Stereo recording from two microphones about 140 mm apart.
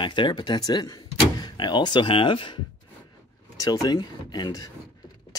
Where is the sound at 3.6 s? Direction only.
25° left (ahead or behind).